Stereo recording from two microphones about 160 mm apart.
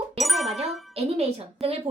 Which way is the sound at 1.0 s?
40° right (ahead or behind).